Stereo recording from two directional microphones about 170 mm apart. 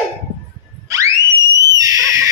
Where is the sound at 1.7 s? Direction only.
20° right (ahead or behind).